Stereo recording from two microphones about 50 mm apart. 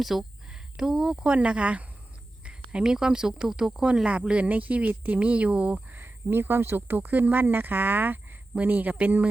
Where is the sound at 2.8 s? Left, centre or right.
Centre.